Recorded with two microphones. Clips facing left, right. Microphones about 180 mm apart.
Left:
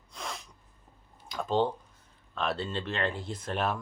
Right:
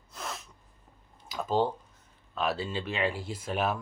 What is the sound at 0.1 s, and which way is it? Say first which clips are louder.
Sneeze: even; 5° right (ahead or behind).